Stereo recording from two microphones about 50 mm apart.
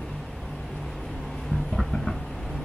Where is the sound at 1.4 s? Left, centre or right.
Centre.